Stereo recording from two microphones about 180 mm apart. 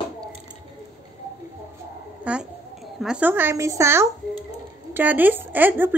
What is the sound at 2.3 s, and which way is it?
A woman's voice, 5° right (ahead or behind).